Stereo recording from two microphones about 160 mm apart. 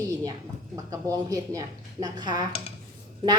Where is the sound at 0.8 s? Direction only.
20° right (ahead or behind).